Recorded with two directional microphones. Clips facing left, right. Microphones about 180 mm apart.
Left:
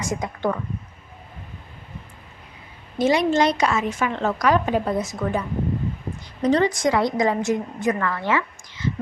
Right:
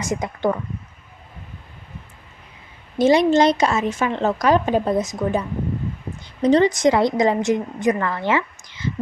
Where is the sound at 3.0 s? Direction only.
25° right (ahead or behind).